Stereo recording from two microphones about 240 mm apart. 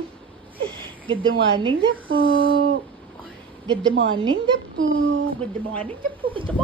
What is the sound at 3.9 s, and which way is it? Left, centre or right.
A woman's voice, right.